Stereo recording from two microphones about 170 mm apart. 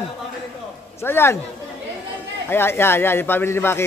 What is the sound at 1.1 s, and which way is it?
Speech, 15° left (ahead or behind).